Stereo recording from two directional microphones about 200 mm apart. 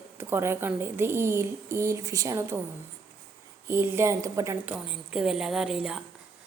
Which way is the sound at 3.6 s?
10° right (ahead or behind).